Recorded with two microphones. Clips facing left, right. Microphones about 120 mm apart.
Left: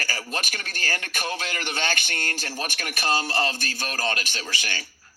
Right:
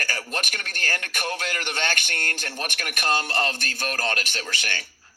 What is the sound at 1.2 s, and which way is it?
Speech, 10° left (ahead or behind).